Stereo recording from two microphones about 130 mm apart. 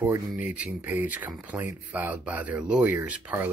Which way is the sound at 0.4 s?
10° right (ahead or behind).